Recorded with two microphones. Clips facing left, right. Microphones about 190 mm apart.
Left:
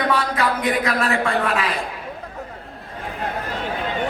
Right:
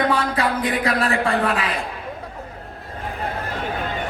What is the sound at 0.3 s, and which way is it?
Speech, 30° right (ahead or behind).